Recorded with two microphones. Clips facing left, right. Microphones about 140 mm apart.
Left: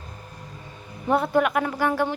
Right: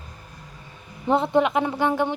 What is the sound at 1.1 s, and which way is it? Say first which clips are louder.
A woman's voice: right 1 dB; 25° right (ahead or behind).